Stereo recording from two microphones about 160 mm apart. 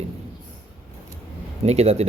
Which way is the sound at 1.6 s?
40° right (ahead or behind).